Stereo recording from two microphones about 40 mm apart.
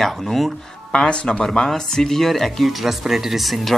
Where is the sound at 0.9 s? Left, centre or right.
Left.